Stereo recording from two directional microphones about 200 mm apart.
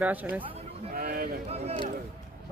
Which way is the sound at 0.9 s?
50° right (ahead or behind).